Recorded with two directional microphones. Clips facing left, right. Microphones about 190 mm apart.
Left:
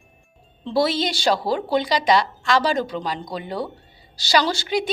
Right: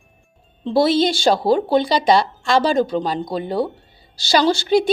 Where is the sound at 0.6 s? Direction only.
25° right (ahead or behind).